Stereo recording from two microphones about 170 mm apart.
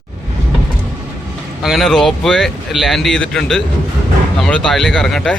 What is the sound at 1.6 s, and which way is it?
Speech, centre (ahead or behind).